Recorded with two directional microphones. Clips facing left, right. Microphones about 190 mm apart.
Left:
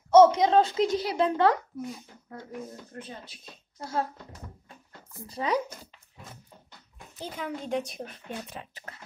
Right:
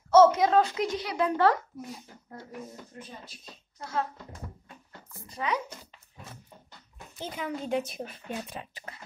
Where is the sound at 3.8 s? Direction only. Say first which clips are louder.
Left 1 dB; 35° left (ahead or behind).